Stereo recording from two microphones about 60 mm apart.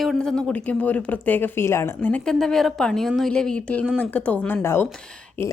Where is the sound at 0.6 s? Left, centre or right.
Left.